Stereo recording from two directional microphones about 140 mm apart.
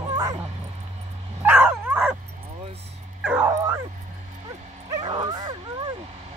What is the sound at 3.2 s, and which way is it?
Dog, 15° right (ahead or behind).